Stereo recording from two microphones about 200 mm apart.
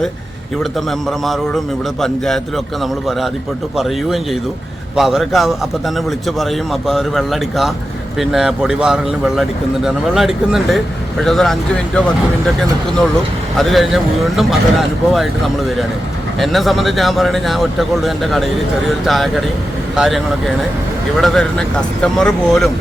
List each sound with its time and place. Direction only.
0.6 s speech: centre (ahead or behind)
3.8 s speech: centre (ahead or behind)
13.6 s speech: centre (ahead or behind)
16.4 s speech: centre (ahead or behind)